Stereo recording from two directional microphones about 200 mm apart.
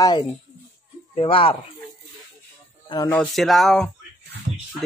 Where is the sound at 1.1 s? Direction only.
25° left (ahead or behind).